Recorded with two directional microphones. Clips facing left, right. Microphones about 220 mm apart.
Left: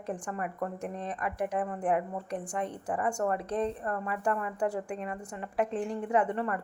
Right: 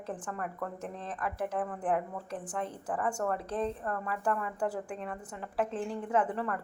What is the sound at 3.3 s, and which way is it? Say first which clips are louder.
Speech: left 2 dB; 5° right (ahead or behind).